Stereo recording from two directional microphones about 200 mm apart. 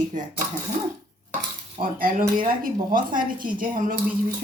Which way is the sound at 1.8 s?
45° right (ahead or behind).